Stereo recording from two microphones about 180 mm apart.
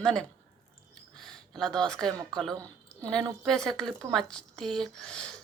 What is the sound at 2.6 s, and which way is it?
Speech, 5° left (ahead or behind).